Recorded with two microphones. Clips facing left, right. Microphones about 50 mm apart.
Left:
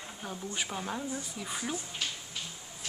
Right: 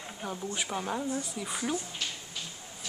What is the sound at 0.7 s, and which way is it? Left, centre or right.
Speech, centre.